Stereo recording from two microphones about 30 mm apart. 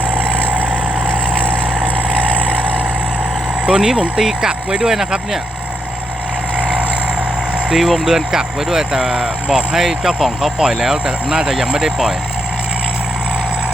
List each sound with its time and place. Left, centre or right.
0.4 s vehicle: right
3.7 s speech: centre
7.7 s speech: centre
8.0 s speech: centre
10.6 s speech: centre
10.9 s speech: right